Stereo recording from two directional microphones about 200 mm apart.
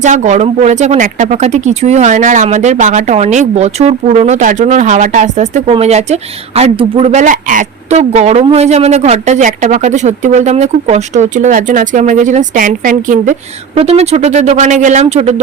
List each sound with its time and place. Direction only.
0.0 s speech: 35° right (ahead or behind)